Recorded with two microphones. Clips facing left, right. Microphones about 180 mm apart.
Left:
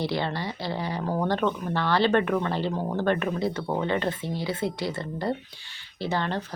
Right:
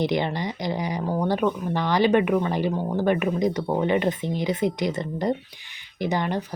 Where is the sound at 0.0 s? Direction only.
20° right (ahead or behind).